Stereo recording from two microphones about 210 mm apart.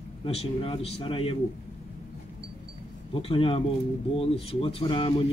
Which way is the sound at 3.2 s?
25° left (ahead or behind).